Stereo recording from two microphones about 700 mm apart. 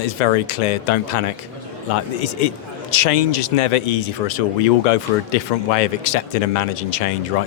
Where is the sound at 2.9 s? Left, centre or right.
Left.